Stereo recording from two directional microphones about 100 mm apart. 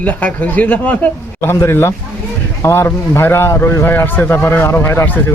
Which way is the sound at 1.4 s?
25° left (ahead or behind).